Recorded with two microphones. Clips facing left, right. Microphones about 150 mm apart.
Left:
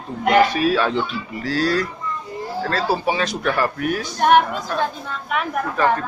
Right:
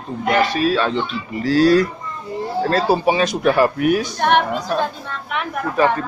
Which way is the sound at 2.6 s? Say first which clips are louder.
Right 5 dB; 25° right (ahead or behind).